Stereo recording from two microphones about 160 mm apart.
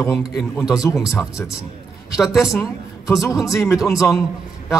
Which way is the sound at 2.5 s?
20° left (ahead or behind).